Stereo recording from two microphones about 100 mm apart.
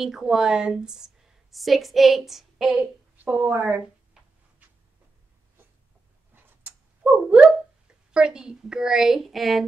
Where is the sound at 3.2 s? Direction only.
15° right (ahead or behind).